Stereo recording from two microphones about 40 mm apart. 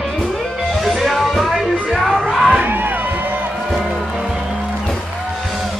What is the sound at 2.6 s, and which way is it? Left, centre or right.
Crowd, right.